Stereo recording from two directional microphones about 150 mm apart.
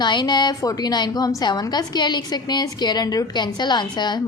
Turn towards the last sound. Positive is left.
turn(degrees=30)  # may be behind; listen again after turning